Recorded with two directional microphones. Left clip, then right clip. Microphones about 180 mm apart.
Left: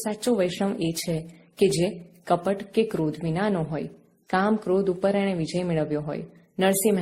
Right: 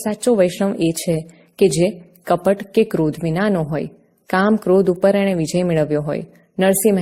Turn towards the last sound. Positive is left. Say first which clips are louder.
# right 7 dB
turn(degrees=-35)  # may be behind; listen again after turning